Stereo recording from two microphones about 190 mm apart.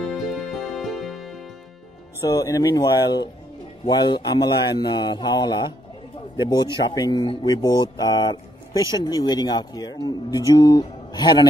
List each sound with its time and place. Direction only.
0.0 s music: centre (ahead or behind)
2.2 s speech: 20° left (ahead or behind)